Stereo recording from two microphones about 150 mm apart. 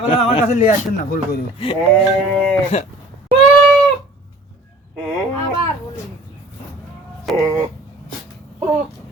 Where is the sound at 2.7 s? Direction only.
45° left (ahead or behind).